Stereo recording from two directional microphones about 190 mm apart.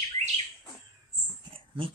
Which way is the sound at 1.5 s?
25° right (ahead or behind).